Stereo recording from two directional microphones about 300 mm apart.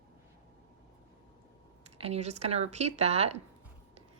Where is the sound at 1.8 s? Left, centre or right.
Right.